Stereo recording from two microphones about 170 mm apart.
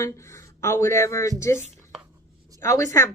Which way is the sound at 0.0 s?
15° left (ahead or behind).